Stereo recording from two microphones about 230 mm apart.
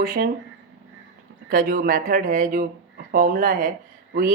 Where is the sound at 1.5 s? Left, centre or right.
Right.